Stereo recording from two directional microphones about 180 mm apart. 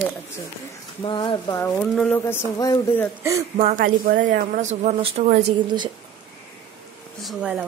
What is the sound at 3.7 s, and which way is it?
Speech, 55° right (ahead or behind).